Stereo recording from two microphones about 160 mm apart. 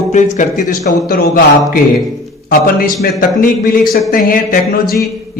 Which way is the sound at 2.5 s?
65° left (ahead or behind).